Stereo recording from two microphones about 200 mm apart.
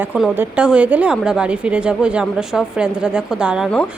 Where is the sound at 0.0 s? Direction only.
10° right (ahead or behind).